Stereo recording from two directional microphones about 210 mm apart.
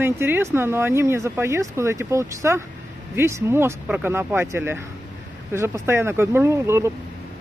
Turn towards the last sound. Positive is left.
turn(degrees=-15)  # may be behind; listen again after turning